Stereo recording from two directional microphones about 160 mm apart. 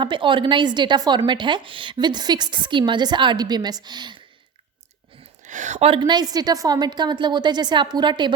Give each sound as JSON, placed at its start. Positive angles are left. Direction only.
{"t": 0.0, "sound": "a woman's voice", "side_deg": -30}
{"t": 5.4, "sound": "a woman's voice", "side_deg": -50}